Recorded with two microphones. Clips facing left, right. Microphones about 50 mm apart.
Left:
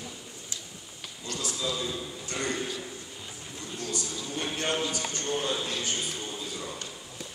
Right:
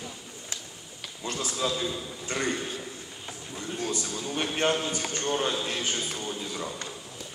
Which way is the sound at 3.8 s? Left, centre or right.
Right.